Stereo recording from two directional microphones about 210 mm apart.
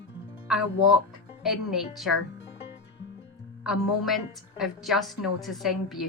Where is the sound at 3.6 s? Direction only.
Centre (ahead or behind).